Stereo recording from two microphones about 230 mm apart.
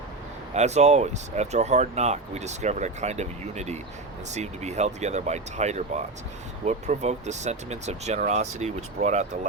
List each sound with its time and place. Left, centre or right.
0.5 s speech: right